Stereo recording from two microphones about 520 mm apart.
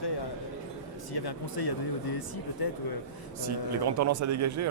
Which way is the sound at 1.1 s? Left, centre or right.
Left.